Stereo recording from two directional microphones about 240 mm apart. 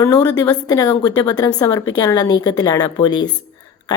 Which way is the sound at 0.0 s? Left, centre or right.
Centre.